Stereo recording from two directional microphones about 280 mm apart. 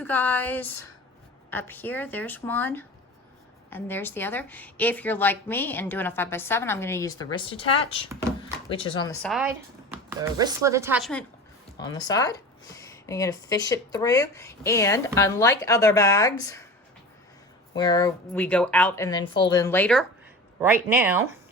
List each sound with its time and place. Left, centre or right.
0.0 s speech: centre
9.2 s speech: centre
11.8 s speech: centre
17.7 s speech: centre
20.6 s speech: centre